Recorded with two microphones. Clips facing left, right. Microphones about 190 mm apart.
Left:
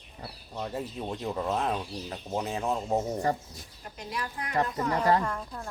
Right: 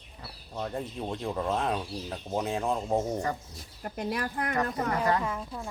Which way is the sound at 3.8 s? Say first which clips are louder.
Right 5 dB; 55° right (ahead or behind).